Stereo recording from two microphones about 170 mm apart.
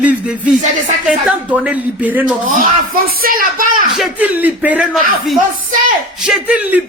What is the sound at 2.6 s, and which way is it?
Speech, 60° right (ahead or behind).